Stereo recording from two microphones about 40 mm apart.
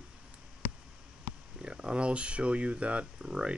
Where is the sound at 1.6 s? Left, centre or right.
Right.